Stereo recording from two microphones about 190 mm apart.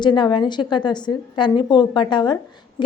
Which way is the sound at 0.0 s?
25° left (ahead or behind).